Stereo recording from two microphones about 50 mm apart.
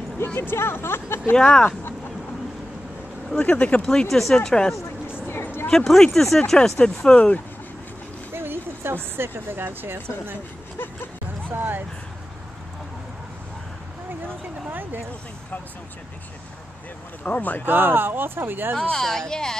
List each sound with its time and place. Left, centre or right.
0.4 s speech: left
1.3 s speech: centre
3.3 s speech: left
3.8 s speech: centre
4.1 s speech: centre
5.3 s a sound: left
5.7 s speech: centre
8.3 s speech: right
11.5 s a sound: right
14.7 s a sound: right
17.2 s speech: left
17.6 s speech: right
18.8 s speech: centre